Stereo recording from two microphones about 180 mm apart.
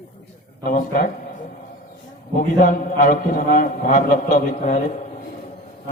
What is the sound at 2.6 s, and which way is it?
A man's voice, 45° left (ahead or behind).